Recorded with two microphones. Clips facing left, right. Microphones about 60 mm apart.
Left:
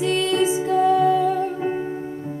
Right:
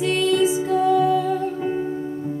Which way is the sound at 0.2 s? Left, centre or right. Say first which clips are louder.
Right 1 dB; left.